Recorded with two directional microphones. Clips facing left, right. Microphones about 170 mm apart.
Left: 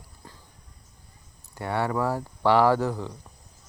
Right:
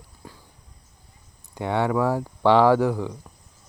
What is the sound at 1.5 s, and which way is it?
Speech, 15° right (ahead or behind).